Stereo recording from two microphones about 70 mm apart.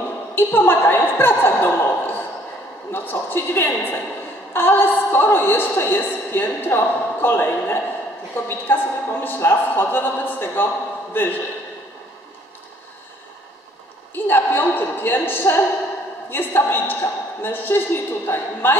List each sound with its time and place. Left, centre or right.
0.3 s a woman's voice: left
14.1 s a woman's voice: left